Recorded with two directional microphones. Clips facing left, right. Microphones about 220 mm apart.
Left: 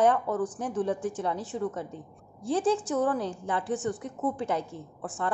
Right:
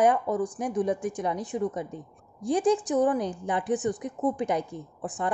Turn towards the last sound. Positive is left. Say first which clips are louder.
# right 2 dB
turn(degrees=-15)  # may be behind; listen again after turning